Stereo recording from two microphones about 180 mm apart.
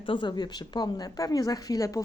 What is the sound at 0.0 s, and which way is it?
A woman's voice, 25° left (ahead or behind).